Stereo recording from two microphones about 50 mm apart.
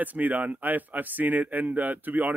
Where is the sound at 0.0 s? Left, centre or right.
Right.